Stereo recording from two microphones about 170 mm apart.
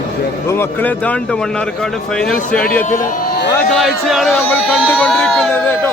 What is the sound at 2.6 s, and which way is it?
Speech, 55° left (ahead or behind).